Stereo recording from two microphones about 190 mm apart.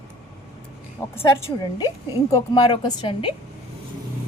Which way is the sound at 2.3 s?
20° left (ahead or behind).